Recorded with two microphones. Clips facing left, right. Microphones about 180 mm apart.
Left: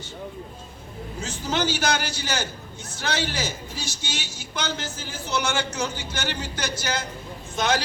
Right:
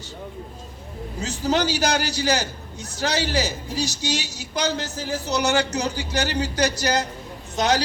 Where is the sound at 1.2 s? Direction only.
35° right (ahead or behind).